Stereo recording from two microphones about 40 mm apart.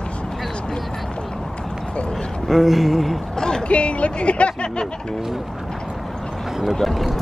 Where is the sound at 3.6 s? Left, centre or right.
Left.